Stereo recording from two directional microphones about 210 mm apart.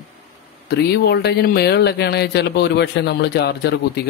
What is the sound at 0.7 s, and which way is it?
Speech, 50° left (ahead or behind).